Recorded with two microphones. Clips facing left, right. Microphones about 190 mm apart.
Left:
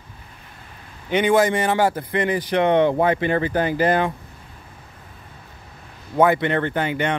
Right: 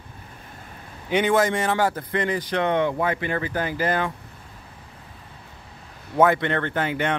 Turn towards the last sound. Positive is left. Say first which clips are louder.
# left 2 dB
turn(degrees=0)  # may be behind; listen again after turning